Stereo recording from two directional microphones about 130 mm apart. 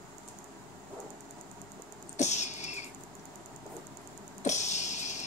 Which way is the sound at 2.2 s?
65° left (ahead or behind).